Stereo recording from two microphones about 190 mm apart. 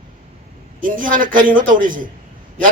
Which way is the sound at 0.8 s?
45° right (ahead or behind).